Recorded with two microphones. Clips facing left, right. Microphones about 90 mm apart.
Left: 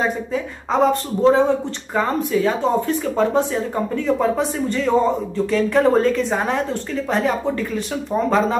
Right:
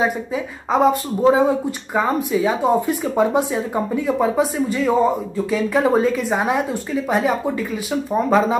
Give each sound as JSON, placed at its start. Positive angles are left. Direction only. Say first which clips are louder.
{"t": 0.0, "sound": "speech", "louder": "right 1 dB", "side_deg": -5}